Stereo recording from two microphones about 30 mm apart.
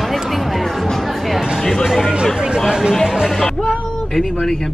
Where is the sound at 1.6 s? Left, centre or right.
Centre.